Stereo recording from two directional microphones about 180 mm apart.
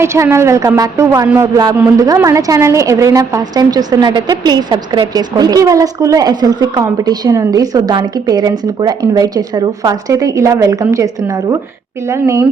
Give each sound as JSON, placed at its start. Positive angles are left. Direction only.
{"t": 0.0, "sound": "speech", "side_deg": -15}